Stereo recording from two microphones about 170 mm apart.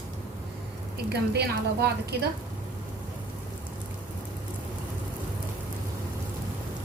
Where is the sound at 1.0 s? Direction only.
75° right (ahead or behind).